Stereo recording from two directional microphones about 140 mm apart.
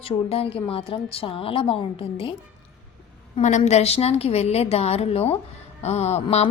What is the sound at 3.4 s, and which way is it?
A woman's voice, 60° left (ahead or behind).